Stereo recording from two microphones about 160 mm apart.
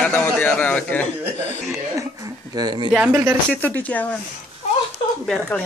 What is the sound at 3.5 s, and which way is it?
Speech, 10° left (ahead or behind).